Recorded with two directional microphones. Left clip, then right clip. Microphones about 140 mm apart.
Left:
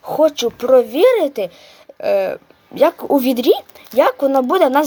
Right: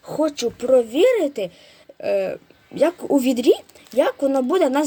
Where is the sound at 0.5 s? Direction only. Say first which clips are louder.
Left 2 dB; 10° right (ahead or behind).